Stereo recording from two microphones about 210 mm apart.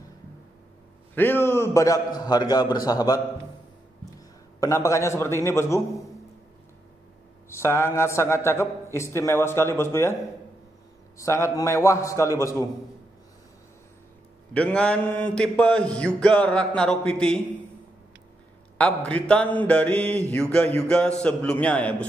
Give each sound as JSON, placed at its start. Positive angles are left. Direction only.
{"t": 1.1, "sound": "a man's voice", "side_deg": 10}
{"t": 4.6, "sound": "a man's voice", "side_deg": 15}
{"t": 7.4, "sound": "a man's voice", "side_deg": 10}
{"t": 11.1, "sound": "a man's voice", "side_deg": 15}
{"t": 14.5, "sound": "mantra", "side_deg": 5}
{"t": 18.8, "sound": "mantra", "side_deg": 5}